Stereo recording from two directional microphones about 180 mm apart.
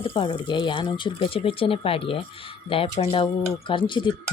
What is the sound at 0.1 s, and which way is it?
Speech, 25° left (ahead or behind).